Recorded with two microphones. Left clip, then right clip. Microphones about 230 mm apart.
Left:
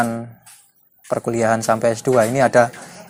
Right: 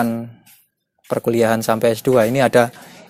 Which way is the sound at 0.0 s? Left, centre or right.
Right.